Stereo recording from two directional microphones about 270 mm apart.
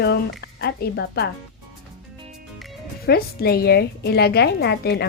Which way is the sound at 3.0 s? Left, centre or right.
Left.